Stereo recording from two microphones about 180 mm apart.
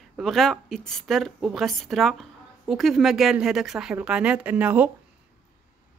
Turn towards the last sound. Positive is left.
turn(degrees=-10)  # may be behind; listen again after turning